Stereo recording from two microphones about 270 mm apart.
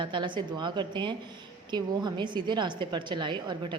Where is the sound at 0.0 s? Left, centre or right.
Centre.